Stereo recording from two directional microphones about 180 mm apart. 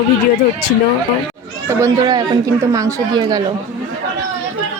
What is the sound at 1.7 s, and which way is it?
Speech, 20° right (ahead or behind).